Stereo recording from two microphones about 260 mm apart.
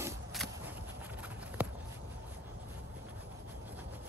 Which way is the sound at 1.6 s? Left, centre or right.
Centre.